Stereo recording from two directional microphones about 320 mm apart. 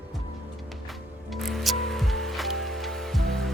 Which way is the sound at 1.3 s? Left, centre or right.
Centre.